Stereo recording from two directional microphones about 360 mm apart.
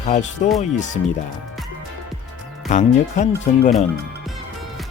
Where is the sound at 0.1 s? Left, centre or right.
Centre.